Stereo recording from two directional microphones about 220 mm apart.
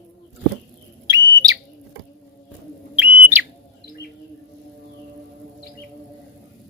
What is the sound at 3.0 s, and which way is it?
Bird, 5° right (ahead or behind).